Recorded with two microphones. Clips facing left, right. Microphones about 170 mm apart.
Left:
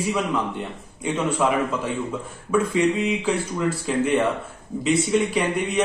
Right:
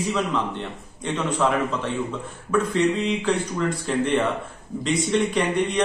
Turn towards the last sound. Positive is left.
turn(degrees=5)  # may be behind; listen again after turning